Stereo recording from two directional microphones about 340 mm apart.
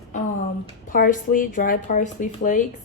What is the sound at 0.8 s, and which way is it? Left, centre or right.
Speech, left.